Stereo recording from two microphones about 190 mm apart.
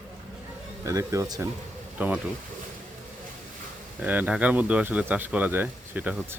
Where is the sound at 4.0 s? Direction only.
10° right (ahead or behind).